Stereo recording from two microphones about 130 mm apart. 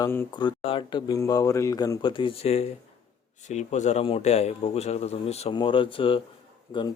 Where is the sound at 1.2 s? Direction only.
25° left (ahead or behind).